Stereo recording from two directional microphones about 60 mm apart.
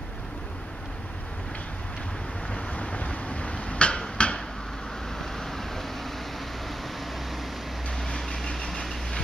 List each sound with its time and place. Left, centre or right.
2.5 s a sound: left
5.2 s vehicle: centre
8.1 s vehicle: centre